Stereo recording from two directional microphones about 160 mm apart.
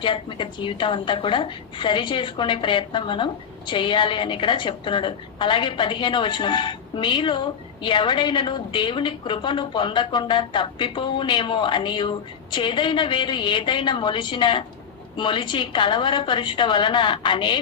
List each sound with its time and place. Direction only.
0.0 s a woman's voice: 30° left (ahead or behind)